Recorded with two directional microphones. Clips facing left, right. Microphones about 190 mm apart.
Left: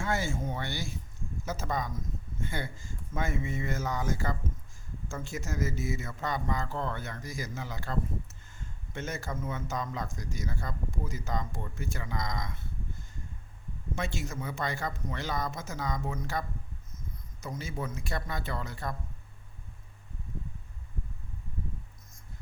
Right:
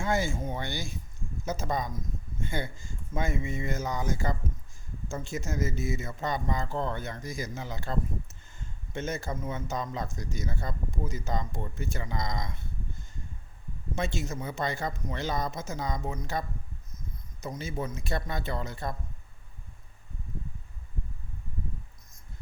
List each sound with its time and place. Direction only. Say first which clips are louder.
0.0 s a man's voice: right 3 dB; 15° right (ahead or behind)
3.2 s a man's voice: right 1 dB; 15° right (ahead or behind)
13.9 s a man's voice: right 3 dB; 20° right (ahead or behind)
17.4 s a man's voice: right 3 dB; 20° right (ahead or behind)